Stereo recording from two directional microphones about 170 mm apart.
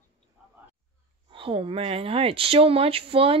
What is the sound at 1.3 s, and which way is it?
Speech, 30° right (ahead or behind).